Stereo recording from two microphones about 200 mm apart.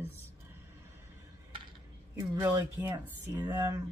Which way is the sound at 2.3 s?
15° right (ahead or behind).